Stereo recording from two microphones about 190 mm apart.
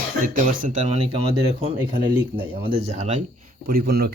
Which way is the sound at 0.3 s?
40° right (ahead or behind).